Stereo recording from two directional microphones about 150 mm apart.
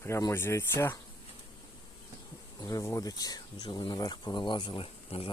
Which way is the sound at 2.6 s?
25° left (ahead or behind).